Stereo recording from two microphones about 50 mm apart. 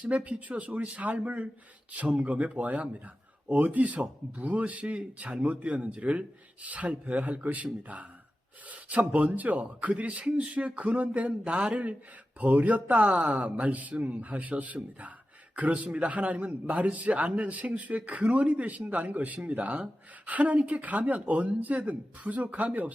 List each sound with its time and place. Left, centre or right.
0.0 s a man's voice: right